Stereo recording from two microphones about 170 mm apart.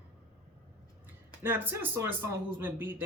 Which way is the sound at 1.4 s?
10° right (ahead or behind).